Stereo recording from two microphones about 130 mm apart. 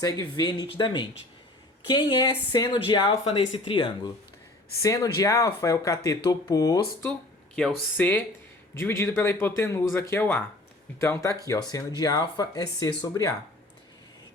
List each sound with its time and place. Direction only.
0.0 s speech: 30° left (ahead or behind)
3.1 s speech: 50° left (ahead or behind)
3.5 s speech: 35° left (ahead or behind)
7.5 s speech: 10° left (ahead or behind); by 13.0 s 30° left (ahead or behind)